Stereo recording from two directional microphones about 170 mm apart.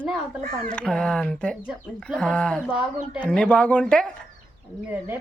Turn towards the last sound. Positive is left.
turn(degrees=-10)  # may be behind; listen again after turning